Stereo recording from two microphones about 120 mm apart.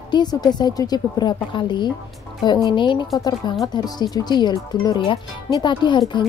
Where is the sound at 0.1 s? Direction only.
35° left (ahead or behind).